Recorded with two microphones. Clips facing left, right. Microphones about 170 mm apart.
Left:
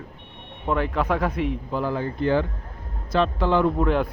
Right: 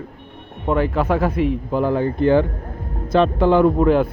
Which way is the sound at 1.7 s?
55° right (ahead or behind).